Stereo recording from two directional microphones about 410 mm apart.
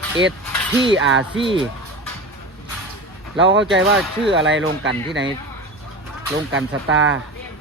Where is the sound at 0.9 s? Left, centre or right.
Right.